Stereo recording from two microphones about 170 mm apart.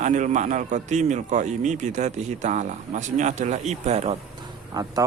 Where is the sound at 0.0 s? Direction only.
45° right (ahead or behind).